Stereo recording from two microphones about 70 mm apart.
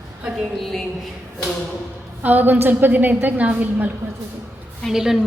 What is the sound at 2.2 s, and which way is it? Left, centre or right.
A woman's voice, right.